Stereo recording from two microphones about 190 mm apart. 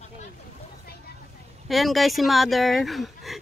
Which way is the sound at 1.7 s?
Centre (ahead or behind).